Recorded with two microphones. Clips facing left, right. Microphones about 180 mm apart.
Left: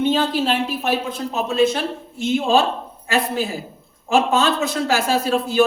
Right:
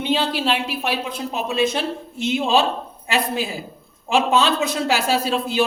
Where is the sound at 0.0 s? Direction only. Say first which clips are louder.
Left 3 dB; 45° left (ahead or behind).